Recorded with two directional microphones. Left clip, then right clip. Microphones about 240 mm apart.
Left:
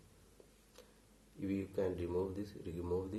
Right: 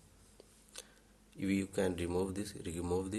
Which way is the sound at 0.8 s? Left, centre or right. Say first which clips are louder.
Right 8 dB; right.